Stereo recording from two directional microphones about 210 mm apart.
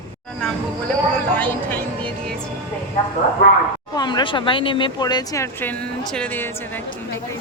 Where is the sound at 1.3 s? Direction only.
10° left (ahead or behind).